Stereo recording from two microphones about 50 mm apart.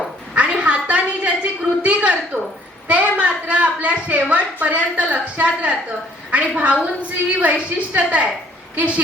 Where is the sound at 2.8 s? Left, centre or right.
Right.